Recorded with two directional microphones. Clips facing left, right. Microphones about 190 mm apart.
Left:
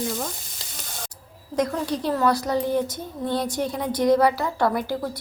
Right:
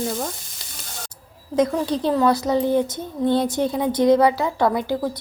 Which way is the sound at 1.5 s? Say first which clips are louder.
Right 4 dB; 25° right (ahead or behind).